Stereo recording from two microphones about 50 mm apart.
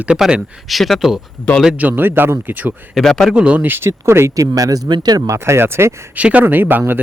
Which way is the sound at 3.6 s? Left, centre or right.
Right.